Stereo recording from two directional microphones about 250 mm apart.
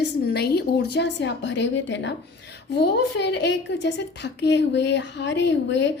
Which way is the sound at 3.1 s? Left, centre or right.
Left.